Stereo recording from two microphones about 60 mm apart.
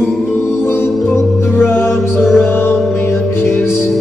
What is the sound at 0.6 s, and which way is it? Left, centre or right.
Music, left.